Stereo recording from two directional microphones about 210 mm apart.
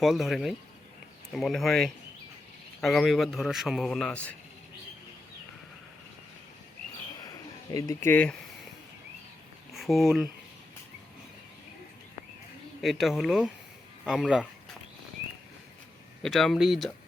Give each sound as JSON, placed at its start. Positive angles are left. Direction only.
{"t": 0.0, "sound": "a man's voice", "side_deg": 0}
{"t": 7.2, "sound": "a sound", "side_deg": 15}
{"t": 9.7, "sound": "speech", "side_deg": 0}
{"t": 12.8, "sound": "a man's voice", "side_deg": 0}
{"t": 16.2, "sound": "a man's voice", "side_deg": 0}